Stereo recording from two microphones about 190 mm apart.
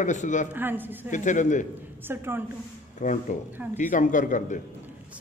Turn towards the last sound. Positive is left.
turn(degrees=45)  # may be behind; listen again after turning